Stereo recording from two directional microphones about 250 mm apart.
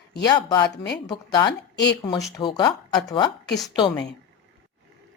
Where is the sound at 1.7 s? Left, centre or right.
Left.